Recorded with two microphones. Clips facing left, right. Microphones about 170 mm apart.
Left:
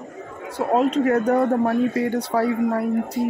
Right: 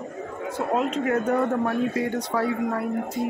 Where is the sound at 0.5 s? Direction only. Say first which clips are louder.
Left 6 dB; 35° left (ahead or behind).